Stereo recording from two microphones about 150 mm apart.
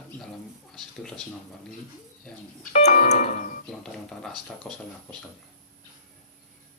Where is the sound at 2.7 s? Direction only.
45° left (ahead or behind).